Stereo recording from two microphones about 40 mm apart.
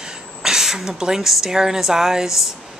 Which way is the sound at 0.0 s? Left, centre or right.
Centre.